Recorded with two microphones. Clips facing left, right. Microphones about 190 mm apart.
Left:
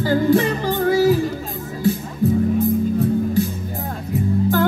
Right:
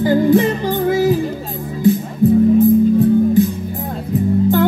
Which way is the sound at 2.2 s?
20° right (ahead or behind).